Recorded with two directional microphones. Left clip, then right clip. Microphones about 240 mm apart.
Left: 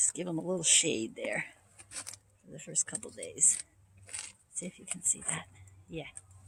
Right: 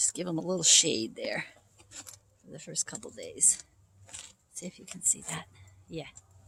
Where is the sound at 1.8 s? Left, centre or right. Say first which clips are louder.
Left 3 dB; centre.